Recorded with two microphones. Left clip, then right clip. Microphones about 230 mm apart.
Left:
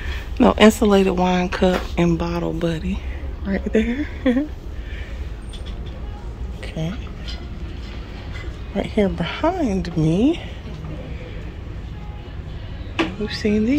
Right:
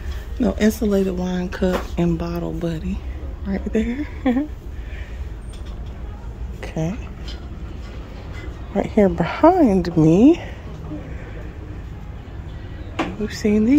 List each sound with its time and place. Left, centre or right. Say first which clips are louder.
0.4 s a woman's voice: left 7 dB; centre
6.6 s a sound: right 3 dB; centre
8.7 s speech: right 4 dB; centre
13.2 s speech: right 1 dB; centre